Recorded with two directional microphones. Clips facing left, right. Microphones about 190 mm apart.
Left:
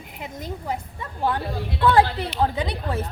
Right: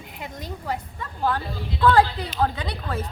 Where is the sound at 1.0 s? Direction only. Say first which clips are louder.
Left 1 dB; 20° left (ahead or behind).